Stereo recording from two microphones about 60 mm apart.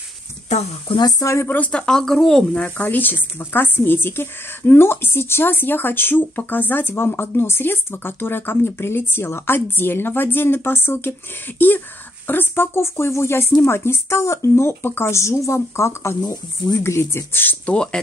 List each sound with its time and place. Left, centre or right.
1.0 s speech: left
1.7 s speech: centre
2.6 s speech: left
16.2 s speech: left
17.1 s speech: left